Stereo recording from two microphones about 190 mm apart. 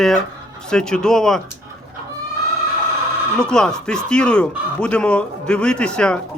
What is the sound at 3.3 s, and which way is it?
Speech, 5° left (ahead or behind).